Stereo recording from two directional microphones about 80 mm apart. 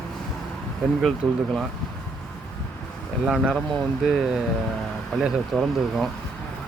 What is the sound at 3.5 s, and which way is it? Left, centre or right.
Speech, centre.